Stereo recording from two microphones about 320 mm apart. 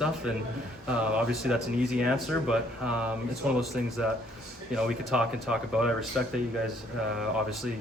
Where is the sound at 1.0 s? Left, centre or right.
Centre.